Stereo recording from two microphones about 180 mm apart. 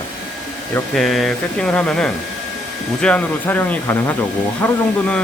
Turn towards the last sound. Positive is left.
turn(degrees=10)  # may be behind; listen again after turning